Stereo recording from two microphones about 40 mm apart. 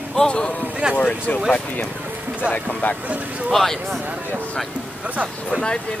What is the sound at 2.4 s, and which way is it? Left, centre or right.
Speech, left.